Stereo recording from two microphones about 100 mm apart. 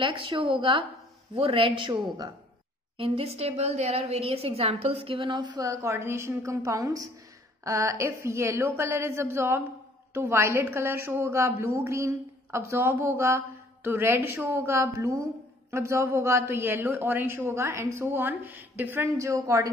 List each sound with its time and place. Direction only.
0.0 s a woman's voice: 55° right (ahead or behind)
1.3 s a woman's voice: 70° right (ahead or behind)
3.0 s a woman's voice: 85° right; by 5.6 s 50° right (ahead or behind)
5.6 s a woman's voice: 30° right (ahead or behind)